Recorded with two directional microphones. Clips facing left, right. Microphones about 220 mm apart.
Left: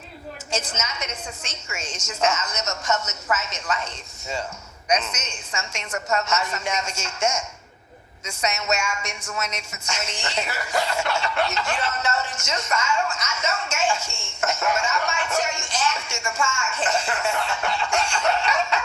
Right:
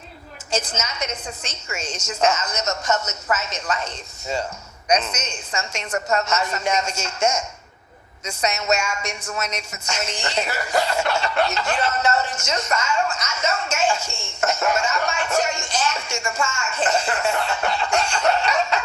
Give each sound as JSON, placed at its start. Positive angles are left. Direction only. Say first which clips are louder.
{"t": 0.5, "sound": "speech", "louder": "right 3 dB", "side_deg": -35}